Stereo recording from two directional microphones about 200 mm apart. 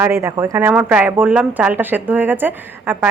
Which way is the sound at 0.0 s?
15° right (ahead or behind).